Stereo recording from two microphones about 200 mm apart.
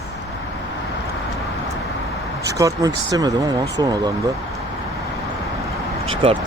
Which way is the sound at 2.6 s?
20° right (ahead or behind).